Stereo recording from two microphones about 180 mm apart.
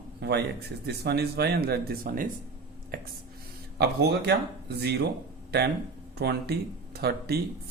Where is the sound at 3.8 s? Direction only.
65° right (ahead or behind).